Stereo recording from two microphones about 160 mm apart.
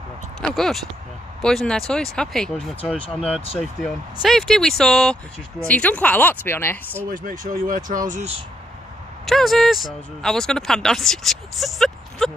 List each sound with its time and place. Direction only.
0.4 s speech: centre (ahead or behind)
7.1 s speech: 60° right (ahead or behind)
9.2 s speech: centre (ahead or behind)